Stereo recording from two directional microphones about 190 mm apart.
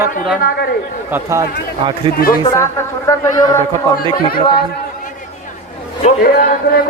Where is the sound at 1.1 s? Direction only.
15° right (ahead or behind).